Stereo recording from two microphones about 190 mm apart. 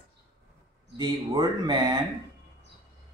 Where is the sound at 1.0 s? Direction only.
20° right (ahead or behind).